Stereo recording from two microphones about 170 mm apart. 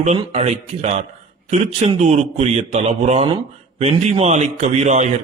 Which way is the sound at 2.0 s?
40° right (ahead or behind).